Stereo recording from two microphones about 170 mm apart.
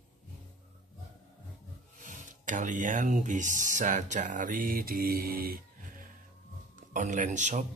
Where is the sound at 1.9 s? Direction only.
50° right (ahead or behind).